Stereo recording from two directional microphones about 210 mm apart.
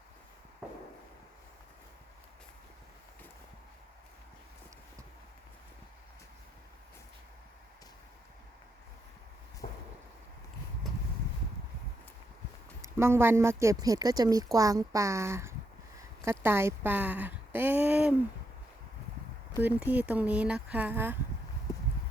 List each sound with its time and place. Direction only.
9.6 s a sound: 35° left (ahead or behind)
13.0 s speech: 10° right (ahead or behind)
19.5 s speech: 10° right (ahead or behind)